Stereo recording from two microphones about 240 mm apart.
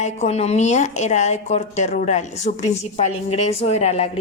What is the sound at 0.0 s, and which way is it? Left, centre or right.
A woman's voice, left.